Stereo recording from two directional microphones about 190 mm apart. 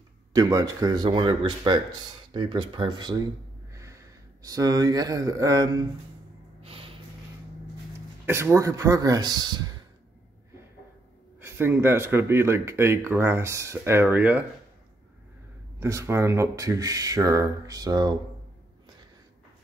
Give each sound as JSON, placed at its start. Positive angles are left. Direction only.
{"t": 0.3, "sound": "speech", "side_deg": -20}
{"t": 6.6, "sound": "snort", "side_deg": -30}
{"t": 8.3, "sound": "speech", "side_deg": -15}
{"t": 11.4, "sound": "speech", "side_deg": -10}
{"t": 15.8, "sound": "speech", "side_deg": -15}